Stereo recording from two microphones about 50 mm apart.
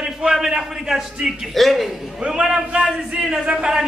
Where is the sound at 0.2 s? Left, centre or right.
Centre.